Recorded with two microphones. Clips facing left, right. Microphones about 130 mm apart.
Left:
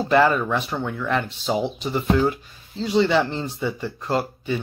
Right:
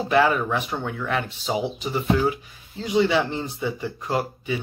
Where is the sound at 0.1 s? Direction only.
10° right (ahead or behind).